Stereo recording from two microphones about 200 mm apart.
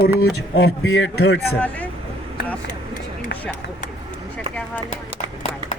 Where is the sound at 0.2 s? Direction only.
75° left (ahead or behind).